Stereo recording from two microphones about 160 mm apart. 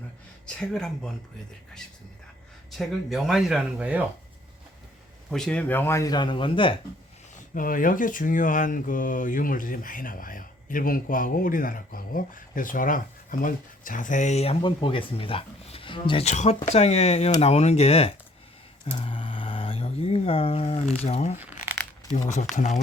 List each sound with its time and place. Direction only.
0.4 s speech: 5° left (ahead or behind)
2.7 s speech: centre (ahead or behind)
5.3 s speech: 5° left (ahead or behind); by 6.7 s 35° left (ahead or behind)
7.5 s speech: 60° left (ahead or behind); by 18.1 s 40° left (ahead or behind)
18.9 s a sound: 30° left (ahead or behind)
20.9 s speech: 40° left (ahead or behind)
21.3 s crumpling: 10° right (ahead or behind)
22.3 s speech: 50° left (ahead or behind)